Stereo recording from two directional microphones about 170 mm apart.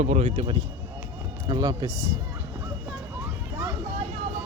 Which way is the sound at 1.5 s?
25° right (ahead or behind).